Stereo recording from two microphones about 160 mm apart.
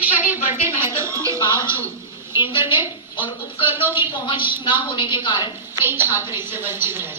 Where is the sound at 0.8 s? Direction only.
15° right (ahead or behind).